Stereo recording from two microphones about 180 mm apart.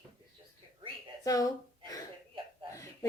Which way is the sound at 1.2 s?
20° left (ahead or behind).